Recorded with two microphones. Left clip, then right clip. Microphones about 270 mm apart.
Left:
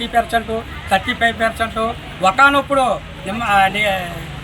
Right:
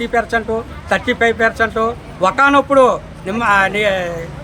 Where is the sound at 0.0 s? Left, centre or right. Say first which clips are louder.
Even; right.